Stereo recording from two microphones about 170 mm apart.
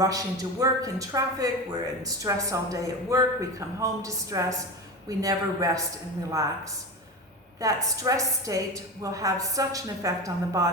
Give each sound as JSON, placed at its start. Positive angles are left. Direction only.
{"t": 0.0, "sound": "speech", "side_deg": -20}
{"t": 7.6, "sound": "speech", "side_deg": -20}